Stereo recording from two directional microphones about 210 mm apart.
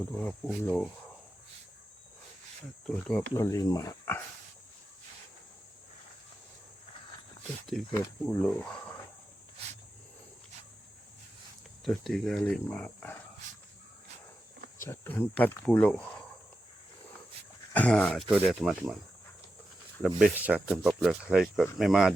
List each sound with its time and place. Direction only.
0.1 s speech: 5° left (ahead or behind)
2.8 s speech: 5° left (ahead or behind)
3.3 s speech: 15° left (ahead or behind)
7.7 s speech: centre (ahead or behind)
11.9 s speech: centre (ahead or behind)
14.8 s speech: 10° left (ahead or behind)
17.7 s speech: 5° left (ahead or behind)
20.2 s speech: 5° right (ahead or behind)